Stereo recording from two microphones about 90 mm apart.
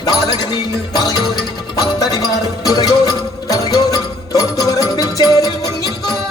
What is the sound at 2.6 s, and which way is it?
Music, 45° left (ahead or behind).